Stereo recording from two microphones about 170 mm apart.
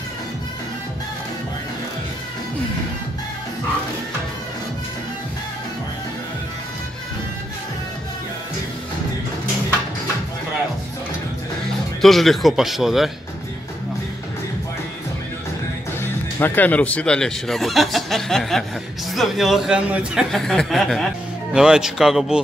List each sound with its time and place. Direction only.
12.0 s speech: centre (ahead or behind)
16.0 s speech: 10° left (ahead or behind)